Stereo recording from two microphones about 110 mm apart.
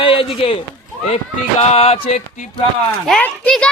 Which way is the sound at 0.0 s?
55° left (ahead or behind).